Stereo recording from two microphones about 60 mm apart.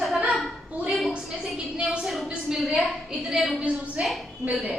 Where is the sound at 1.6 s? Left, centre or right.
Centre.